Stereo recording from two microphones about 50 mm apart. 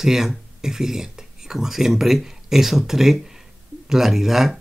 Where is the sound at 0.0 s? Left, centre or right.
Centre.